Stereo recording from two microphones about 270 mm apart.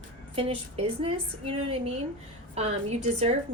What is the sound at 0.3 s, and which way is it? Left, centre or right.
A woman's voice, right.